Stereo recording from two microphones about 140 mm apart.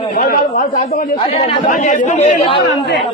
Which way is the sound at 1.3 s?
45° left (ahead or behind).